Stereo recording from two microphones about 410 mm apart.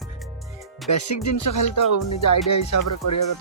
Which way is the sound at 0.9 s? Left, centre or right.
Left.